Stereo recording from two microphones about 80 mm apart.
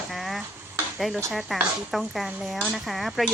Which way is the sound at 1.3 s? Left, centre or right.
Centre.